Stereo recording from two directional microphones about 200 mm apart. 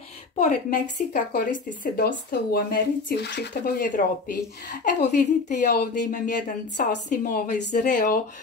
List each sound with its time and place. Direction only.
0.4 s speech: 40° left (ahead or behind)
5.0 s a woman's voice: 40° left (ahead or behind)